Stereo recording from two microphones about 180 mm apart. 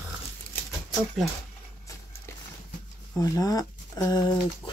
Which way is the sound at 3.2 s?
20° left (ahead or behind).